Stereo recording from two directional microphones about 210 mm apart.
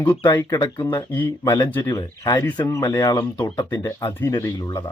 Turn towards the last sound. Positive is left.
turn(degrees=20)  # may be behind; listen again after turning